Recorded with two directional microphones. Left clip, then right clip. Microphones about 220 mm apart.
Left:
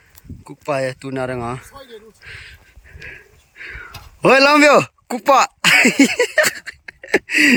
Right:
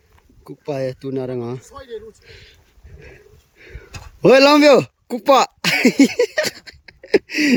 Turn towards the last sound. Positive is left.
turn(degrees=-5)  # may be behind; listen again after turning